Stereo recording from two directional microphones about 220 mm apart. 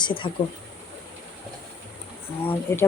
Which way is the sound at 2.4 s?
10° left (ahead or behind).